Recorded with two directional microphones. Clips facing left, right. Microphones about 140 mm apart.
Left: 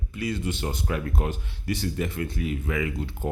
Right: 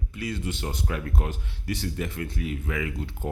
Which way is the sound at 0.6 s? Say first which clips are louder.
Left 2 dB; 20° left (ahead or behind).